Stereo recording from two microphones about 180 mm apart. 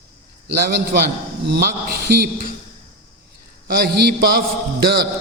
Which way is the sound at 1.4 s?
65° right (ahead or behind).